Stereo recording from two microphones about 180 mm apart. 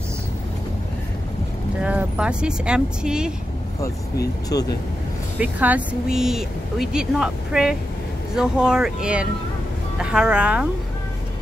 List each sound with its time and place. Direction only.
1.8 s speech: 5° right (ahead or behind)
4.5 s speech: 20° left (ahead or behind)
5.4 s speech: 10° right (ahead or behind)